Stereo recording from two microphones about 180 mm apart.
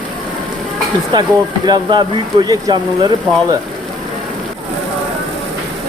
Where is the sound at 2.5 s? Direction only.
25° right (ahead or behind).